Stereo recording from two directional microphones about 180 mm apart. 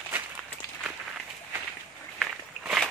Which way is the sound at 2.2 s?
Centre (ahead or behind).